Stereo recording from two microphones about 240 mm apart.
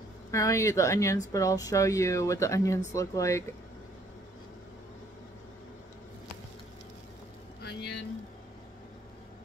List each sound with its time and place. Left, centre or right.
0.3 s a woman's voice: centre
7.6 s vehicle: left